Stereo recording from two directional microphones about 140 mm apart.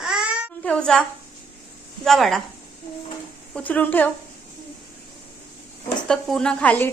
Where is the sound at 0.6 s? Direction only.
5° left (ahead or behind).